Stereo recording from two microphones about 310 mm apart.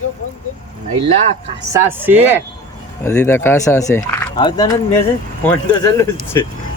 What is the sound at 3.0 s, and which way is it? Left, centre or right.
Speech, centre.